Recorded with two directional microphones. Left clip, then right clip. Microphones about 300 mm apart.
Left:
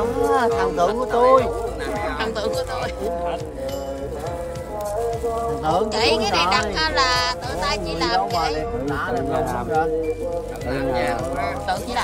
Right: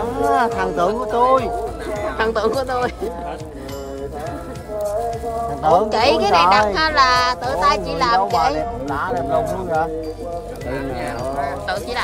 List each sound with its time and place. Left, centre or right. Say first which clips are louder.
0.6 s music: right 1 dB; right
2.1 s speech: right 9 dB; centre
5.6 s a woman's voice: right 7 dB; centre
11.6 s speech: right 1 dB; centre